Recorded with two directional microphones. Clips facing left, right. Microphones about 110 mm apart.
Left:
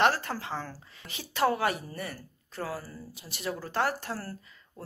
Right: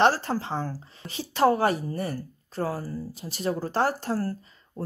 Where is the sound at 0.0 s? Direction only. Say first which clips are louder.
Right 4 dB; 30° right (ahead or behind).